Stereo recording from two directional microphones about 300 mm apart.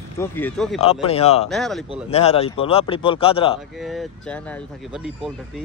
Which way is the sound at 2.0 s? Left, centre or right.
Left.